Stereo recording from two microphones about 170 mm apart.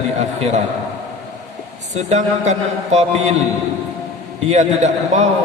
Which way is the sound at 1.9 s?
40° right (ahead or behind).